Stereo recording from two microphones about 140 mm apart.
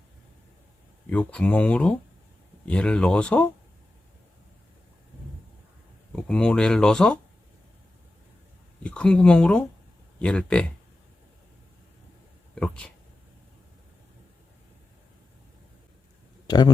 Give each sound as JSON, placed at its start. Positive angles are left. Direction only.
{"t": 1.1, "sound": "speech", "side_deg": 10}
{"t": 6.2, "sound": "speech", "side_deg": 5}
{"t": 8.8, "sound": "speech", "side_deg": 5}
{"t": 12.5, "sound": "speech", "side_deg": 10}
{"t": 16.5, "sound": "speech", "side_deg": 30}